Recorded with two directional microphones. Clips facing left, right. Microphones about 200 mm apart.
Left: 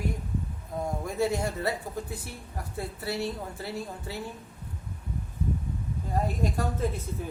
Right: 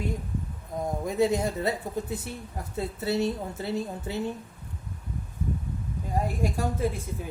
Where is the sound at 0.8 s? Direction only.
20° right (ahead or behind).